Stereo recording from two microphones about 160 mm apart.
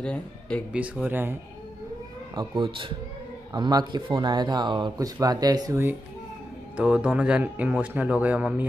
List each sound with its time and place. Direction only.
0.0 s speech: 5° left (ahead or behind)
0.7 s speech: 10° right (ahead or behind)
2.3 s speech: 30° right (ahead or behind); by 8.6 s 10° right (ahead or behind)